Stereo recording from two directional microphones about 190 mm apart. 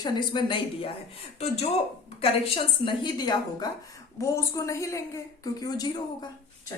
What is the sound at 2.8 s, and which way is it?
A woman's voice, 25° left (ahead or behind).